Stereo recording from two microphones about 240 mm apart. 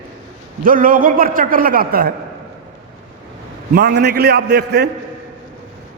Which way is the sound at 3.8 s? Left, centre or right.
Right.